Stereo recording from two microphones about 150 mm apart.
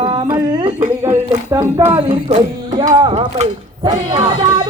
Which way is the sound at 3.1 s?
45° right (ahead or behind).